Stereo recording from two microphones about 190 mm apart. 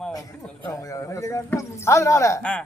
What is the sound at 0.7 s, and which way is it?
Speech, 15° left (ahead or behind).